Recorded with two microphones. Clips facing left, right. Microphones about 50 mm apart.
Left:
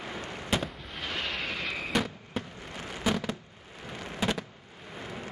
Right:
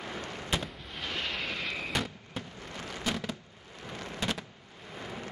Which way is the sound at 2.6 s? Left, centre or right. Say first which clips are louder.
Left 3 dB; centre.